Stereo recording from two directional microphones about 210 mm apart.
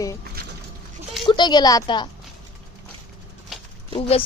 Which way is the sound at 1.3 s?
20° left (ahead or behind).